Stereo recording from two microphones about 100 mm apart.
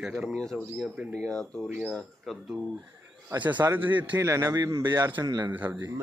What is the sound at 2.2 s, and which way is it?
Speech, 5° right (ahead or behind).